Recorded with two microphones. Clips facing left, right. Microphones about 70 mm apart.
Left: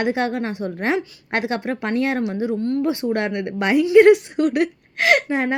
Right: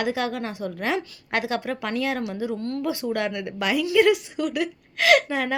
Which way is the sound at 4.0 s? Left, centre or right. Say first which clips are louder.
Left 7 dB; left.